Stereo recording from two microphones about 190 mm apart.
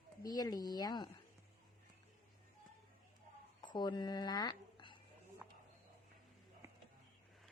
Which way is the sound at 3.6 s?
25° left (ahead or behind).